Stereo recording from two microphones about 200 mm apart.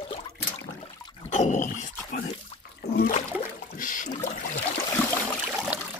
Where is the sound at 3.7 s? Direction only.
40° left (ahead or behind).